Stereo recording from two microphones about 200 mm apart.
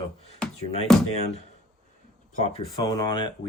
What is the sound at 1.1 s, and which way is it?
Speech, 35° left (ahead or behind).